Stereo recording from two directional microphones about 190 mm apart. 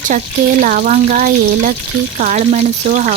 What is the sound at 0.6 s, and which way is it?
A woman's voice, 45° right (ahead or behind).